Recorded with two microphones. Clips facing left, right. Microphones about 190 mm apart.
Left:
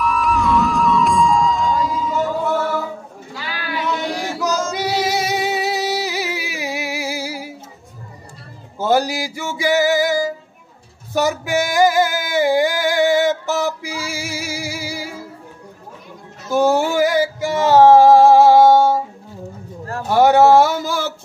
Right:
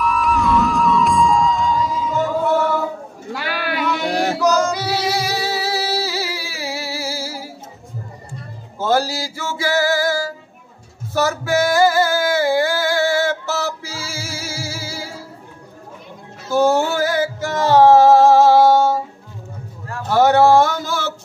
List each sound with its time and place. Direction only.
0.0 s music: centre (ahead or behind)
3.3 s music: 65° right (ahead or behind)
4.7 s music: 20° left (ahead or behind)
8.7 s music: 15° left (ahead or behind)
11.1 s male singing: 15° left (ahead or behind)
16.4 s male singing: 15° left (ahead or behind)
20.1 s a sound: 10° left (ahead or behind)